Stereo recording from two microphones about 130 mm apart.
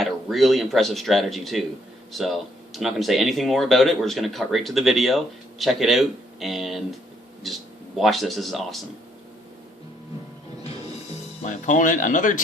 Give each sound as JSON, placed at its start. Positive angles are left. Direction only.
{"t": 0.0, "sound": "speech", "side_deg": 0}
{"t": 11.4, "sound": "speech", "side_deg": 70}